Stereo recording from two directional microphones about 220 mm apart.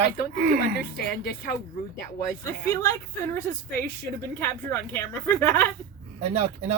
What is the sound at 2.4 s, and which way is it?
Speech, 10° left (ahead or behind).